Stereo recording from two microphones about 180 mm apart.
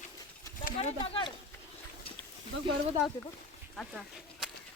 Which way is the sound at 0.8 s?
30° left (ahead or behind).